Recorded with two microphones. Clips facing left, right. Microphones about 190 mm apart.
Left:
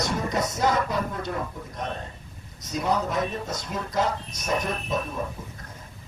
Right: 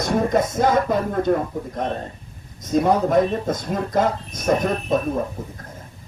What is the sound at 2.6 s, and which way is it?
Speech, 50° right (ahead or behind).